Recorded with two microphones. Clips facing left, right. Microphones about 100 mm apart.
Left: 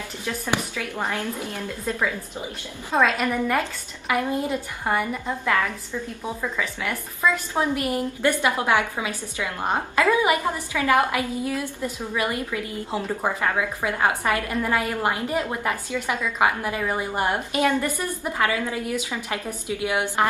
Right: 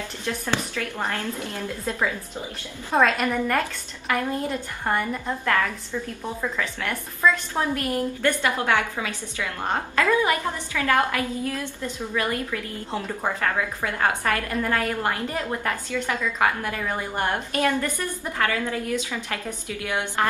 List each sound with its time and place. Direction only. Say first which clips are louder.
0.2 s a woman's voice: left 1 dB; 10° left (ahead or behind)
2.9 s speech: right 1 dB; 5° right (ahead or behind)
4.1 s a woman's voice: left 2 dB; 15° left (ahead or behind)
7.5 s a woman's voice: left 1 dB; 15° left (ahead or behind)